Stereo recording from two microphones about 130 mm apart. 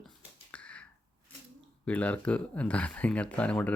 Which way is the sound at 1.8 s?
10° left (ahead or behind).